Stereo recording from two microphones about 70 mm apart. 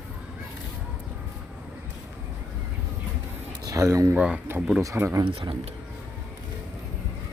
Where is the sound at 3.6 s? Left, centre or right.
Right.